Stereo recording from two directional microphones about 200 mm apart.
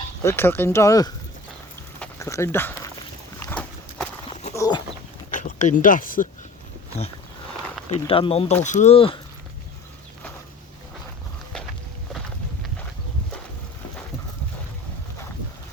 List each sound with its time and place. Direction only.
0.2 s speech: 10° left (ahead or behind)
2.0 s a sound: 15° left (ahead or behind)
3.4 s horse: 10° left (ahead or behind)
4.5 s livestock: 15° left (ahead or behind)
5.3 s speech: 40° left (ahead or behind)
8.0 s speech: 25° left (ahead or behind)